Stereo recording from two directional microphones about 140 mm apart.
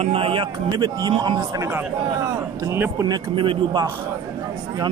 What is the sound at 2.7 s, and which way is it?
Speech, 20° right (ahead or behind).